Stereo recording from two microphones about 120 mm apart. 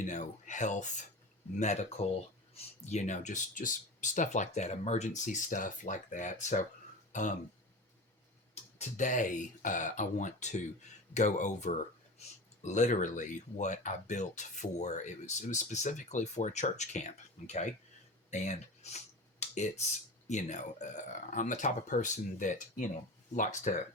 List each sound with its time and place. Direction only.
0.0 s speech: 90° left
1.5 s speech: 70° left (ahead or behind); by 6.7 s 90° left
7.1 s throat clearing: 90° left
8.8 s speech: 90° left
12.2 s speech: 65° left (ahead or behind)
12.6 s speech: 85° left
18.3 s tick-tock: 65° left (ahead or behind)
20.2 s speech: 80° left